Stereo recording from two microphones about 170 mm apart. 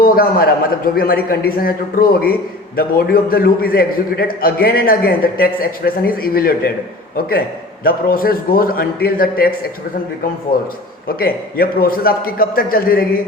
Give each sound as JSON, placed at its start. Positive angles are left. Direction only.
{"t": 0.0, "sound": "a man's voice", "side_deg": 60}
{"t": 7.9, "sound": "a man's voice", "side_deg": 60}
{"t": 10.5, "sound": "a man's voice", "side_deg": 60}